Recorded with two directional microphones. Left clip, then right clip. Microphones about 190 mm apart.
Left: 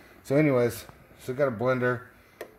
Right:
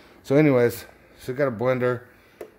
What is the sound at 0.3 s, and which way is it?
Speech, 10° right (ahead or behind).